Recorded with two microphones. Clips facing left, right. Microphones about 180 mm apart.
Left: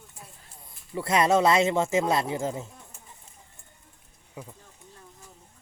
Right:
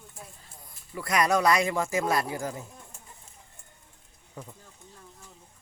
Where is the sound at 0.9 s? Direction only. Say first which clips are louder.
Left 3 dB; 25° left (ahead or behind).